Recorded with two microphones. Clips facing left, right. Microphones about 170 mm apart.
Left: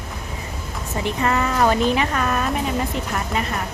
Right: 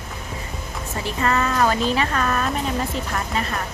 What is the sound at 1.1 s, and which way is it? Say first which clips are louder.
Speech: left 1 dB; 15° left (ahead or behind).